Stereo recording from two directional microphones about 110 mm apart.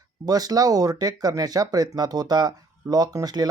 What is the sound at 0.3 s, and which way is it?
Speech, 35° right (ahead or behind).